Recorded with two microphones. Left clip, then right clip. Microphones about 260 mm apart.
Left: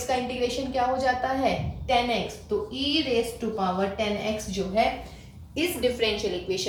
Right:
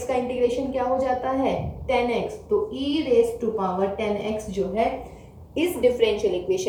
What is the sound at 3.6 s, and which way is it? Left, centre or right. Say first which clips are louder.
Speech: left 1 dB; left.